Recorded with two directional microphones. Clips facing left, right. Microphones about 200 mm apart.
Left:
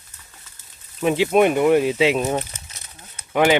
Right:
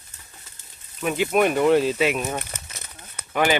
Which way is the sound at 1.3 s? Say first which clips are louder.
Left 2 dB; 20° left (ahead or behind).